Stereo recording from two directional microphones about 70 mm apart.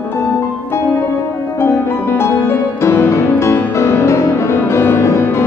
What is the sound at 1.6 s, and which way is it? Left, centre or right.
Music, left.